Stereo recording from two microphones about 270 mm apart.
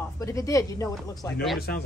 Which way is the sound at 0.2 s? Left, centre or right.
Centre.